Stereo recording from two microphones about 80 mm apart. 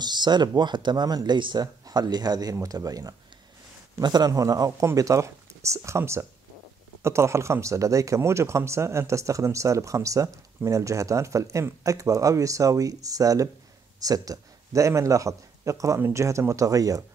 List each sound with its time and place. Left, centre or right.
0.0 s speech: right
2.5 s speech: right
4.0 s speech: right
4.3 s a man's voice: right